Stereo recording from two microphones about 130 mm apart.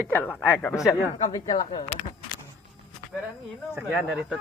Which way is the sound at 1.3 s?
35° left (ahead or behind).